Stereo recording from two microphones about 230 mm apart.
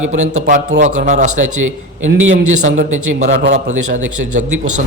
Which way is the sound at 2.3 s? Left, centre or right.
Right.